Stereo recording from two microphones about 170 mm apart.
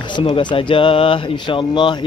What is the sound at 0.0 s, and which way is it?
Speech, 30° left (ahead or behind).